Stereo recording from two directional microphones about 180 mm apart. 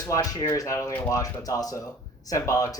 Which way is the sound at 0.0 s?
20° left (ahead or behind).